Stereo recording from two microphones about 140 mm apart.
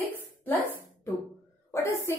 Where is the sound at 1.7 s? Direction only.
15° left (ahead or behind).